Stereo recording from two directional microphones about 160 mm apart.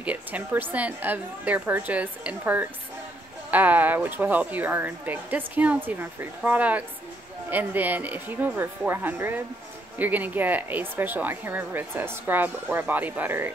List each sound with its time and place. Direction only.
0.0 s a woman's voice: 10° right (ahead or behind)